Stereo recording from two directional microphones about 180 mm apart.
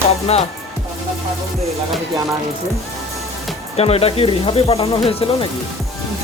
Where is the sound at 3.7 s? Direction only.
35° left (ahead or behind).